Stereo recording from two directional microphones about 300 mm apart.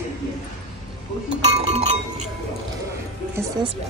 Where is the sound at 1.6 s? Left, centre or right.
Centre.